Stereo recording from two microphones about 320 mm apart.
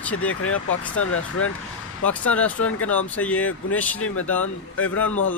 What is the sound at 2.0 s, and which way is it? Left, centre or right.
Speech, centre.